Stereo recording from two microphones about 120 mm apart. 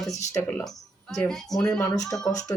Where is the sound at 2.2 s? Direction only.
30° left (ahead or behind).